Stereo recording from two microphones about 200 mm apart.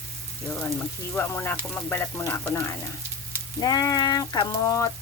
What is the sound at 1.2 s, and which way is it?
Frying, 10° left (ahead or behind).